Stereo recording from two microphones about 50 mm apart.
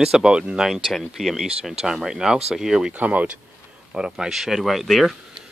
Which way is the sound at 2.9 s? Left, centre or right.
Right.